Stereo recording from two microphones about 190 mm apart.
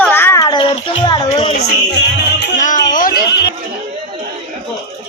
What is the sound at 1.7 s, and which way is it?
Music, 60° left (ahead or behind).